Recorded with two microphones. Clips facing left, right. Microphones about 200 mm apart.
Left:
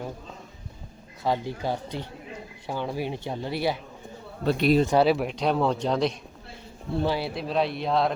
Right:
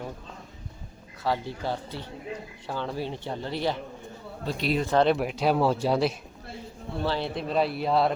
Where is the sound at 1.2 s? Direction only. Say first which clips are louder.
Left 2 dB; 15° left (ahead or behind).